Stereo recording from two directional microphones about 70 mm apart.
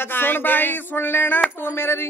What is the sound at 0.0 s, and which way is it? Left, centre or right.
Speech, left.